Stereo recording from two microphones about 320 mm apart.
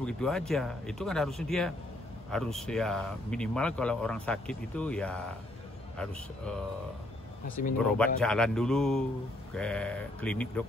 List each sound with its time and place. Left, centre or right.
0.0 s speech: centre
7.4 s speech: left
7.8 s speech: centre